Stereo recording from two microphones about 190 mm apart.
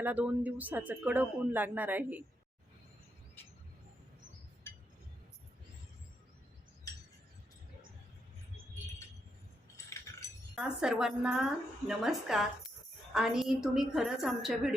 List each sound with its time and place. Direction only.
0.0 s speech: 10° right (ahead or behind)
9.7 s a sound: 15° left (ahead or behind)
10.5 s a woman's voice: 5° right (ahead or behind)